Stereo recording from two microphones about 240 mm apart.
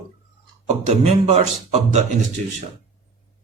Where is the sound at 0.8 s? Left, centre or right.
Right.